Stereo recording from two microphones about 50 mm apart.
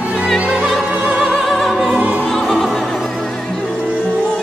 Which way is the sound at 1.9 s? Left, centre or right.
Right.